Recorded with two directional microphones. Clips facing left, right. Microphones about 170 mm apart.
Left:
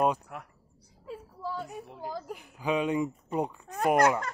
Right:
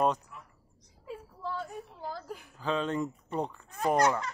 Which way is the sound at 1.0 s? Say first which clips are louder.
Left 1 dB; 5° left (ahead or behind).